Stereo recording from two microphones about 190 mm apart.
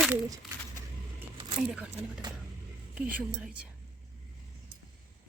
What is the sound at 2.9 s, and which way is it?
Speech, 5° right (ahead or behind).